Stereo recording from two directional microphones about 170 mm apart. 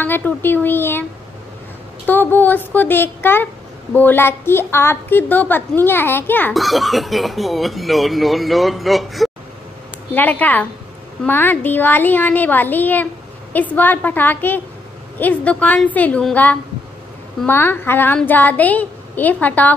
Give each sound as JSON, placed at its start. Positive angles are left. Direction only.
{"t": 0.0, "sound": "a child's voice", "side_deg": 10}
{"t": 2.0, "sound": "a child's voice", "side_deg": 10}
{"t": 6.5, "sound": "speech", "side_deg": 0}
{"t": 10.1, "sound": "a child's voice", "side_deg": 10}